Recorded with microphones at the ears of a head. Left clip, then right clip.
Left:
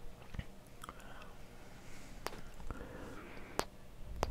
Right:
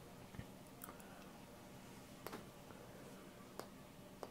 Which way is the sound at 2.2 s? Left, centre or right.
Left.